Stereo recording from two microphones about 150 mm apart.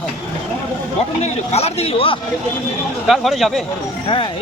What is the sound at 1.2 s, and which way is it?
Speech, 45° left (ahead or behind).